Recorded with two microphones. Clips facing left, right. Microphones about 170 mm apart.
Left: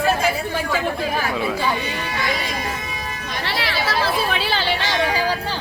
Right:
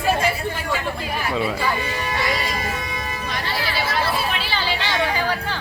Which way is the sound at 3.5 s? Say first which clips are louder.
Left 3 dB; 75° left (ahead or behind).